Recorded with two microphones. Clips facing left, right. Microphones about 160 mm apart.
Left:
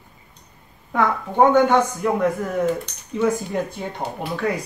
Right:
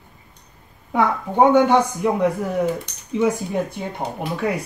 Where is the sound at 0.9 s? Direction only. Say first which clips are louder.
Right 1 dB; 15° right (ahead or behind).